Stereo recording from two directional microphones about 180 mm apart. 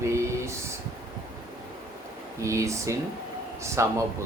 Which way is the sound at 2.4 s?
15° right (ahead or behind).